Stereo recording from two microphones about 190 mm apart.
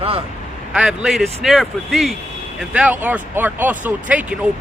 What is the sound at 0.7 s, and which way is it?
Speech, 5° right (ahead or behind).